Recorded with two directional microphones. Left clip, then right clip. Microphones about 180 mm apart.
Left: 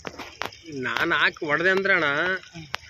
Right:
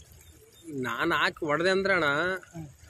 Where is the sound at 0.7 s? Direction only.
5° right (ahead or behind).